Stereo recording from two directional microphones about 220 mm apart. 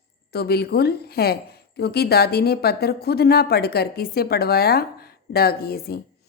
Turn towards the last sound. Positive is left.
turn(degrees=45)  # may be behind; listen again after turning